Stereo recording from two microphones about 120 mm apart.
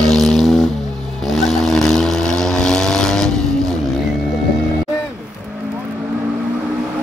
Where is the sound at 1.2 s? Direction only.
Centre (ahead or behind).